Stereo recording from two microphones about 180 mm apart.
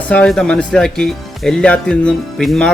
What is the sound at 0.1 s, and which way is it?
Speech, 5° left (ahead or behind).